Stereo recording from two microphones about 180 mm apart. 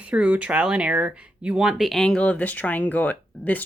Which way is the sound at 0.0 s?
5° right (ahead or behind).